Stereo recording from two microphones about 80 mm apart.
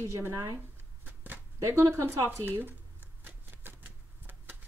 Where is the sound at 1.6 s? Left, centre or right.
Right.